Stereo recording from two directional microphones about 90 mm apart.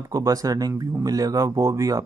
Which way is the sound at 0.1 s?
40° right (ahead or behind).